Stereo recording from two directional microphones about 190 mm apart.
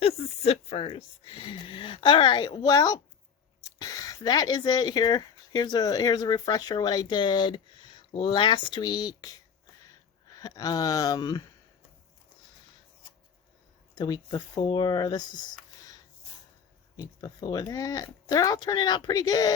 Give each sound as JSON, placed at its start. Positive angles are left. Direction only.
{"t": 0.0, "sound": "speech", "side_deg": 30}
{"t": 10.3, "sound": "speech", "side_deg": 20}
{"t": 13.9, "sound": "speech", "side_deg": 20}
{"t": 17.0, "sound": "speech", "side_deg": 20}